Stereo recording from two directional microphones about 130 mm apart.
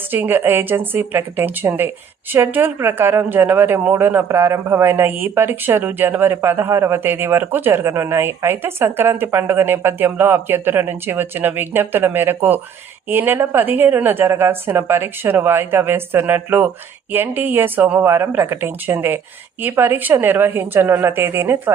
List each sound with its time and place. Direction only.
0.1 s a woman's voice: 15° right (ahead or behind)